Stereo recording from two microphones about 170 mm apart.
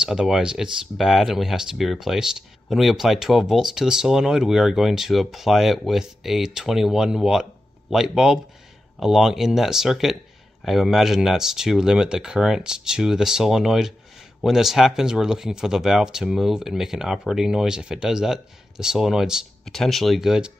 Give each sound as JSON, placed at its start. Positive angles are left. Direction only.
{"t": 0.0, "sound": "speech", "side_deg": -5}